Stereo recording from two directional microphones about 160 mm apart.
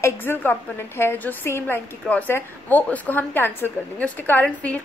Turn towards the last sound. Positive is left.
turn(degrees=10)  # may be behind; listen again after turning